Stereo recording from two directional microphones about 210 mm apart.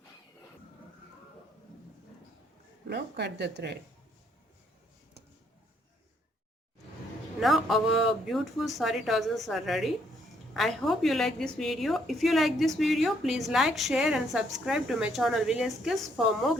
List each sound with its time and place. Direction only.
2.9 s speech: 55° right (ahead or behind)
7.3 s a woman's voice: centre (ahead or behind)